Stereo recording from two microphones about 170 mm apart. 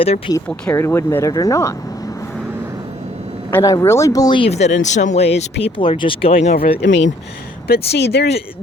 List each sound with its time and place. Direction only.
0.0 s speech: 35° left (ahead or behind)
0.3 s speech: 10° left (ahead or behind)
3.5 s speech: 20° left (ahead or behind); by 6.6 s 40° left (ahead or behind)
6.8 s speech: 90° left
7.7 s speech: 75° left (ahead or behind)